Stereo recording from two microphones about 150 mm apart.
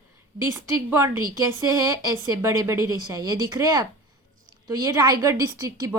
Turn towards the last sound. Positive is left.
turn(degrees=-20)  # may be behind; listen again after turning